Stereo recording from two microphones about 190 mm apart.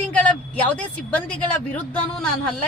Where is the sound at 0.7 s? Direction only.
5° left (ahead or behind).